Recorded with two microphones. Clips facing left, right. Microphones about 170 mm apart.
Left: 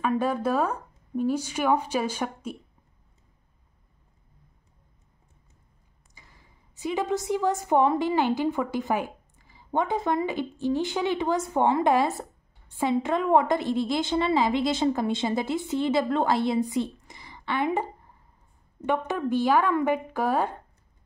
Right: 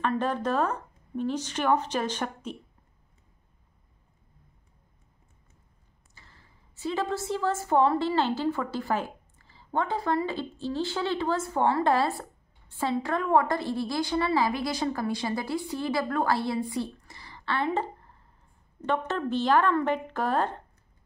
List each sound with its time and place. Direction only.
0.0 s a woman's voice: 10° left (ahead or behind)
6.1 s a woman's voice: 15° left (ahead or behind)